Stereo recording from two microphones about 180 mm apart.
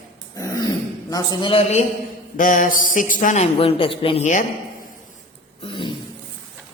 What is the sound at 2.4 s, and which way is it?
A man's voice, 45° left (ahead or behind).